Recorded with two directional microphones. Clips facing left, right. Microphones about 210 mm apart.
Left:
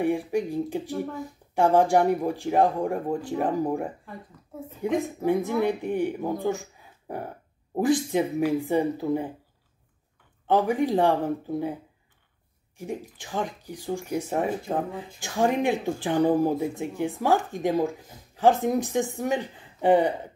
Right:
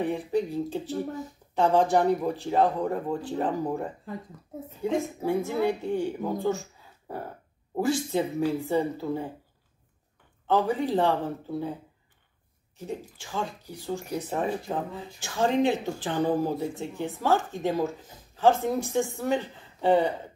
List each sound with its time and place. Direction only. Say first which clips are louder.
0.0 s speech: left 2 dB; 10° left (ahead or behind)
6.4 s a sound: even; 15° left (ahead or behind)
7.8 s speech: left 3 dB; 15° left (ahead or behind)
10.4 s speech: left 2 dB; 15° left (ahead or behind)
12.7 s speech: left 2 dB; 15° left (ahead or behind)